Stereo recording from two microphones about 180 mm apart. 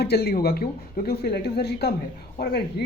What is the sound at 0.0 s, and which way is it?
Speech, 65° left (ahead or behind).